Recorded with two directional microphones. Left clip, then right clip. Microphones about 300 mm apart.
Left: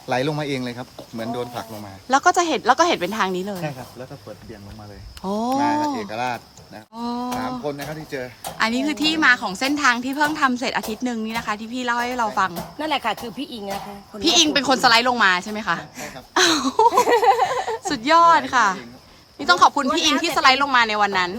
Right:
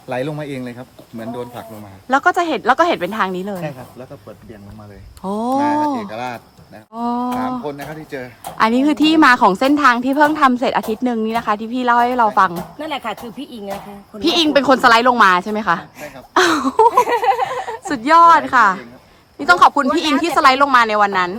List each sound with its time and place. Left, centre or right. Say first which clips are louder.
0.1 s speech: left 1 dB; centre
5.2 s speech: right 3 dB; centre
17.0 s a sound: right 1 dB; left
17.8 s speech: right 5 dB; centre